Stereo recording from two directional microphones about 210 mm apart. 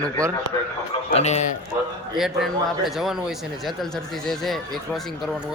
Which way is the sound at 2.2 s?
Centre (ahead or behind).